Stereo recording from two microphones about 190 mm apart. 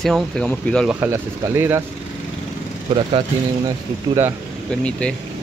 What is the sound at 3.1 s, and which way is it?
Speech, 25° right (ahead or behind).